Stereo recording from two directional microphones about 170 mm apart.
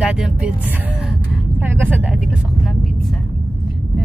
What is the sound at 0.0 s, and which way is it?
Speech, 5° right (ahead or behind).